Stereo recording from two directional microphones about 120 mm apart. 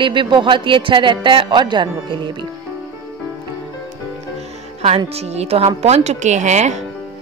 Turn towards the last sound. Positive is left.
turn(degrees=-80)